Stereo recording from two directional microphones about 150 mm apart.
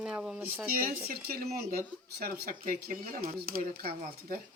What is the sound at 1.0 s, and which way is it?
Speech, 90° right.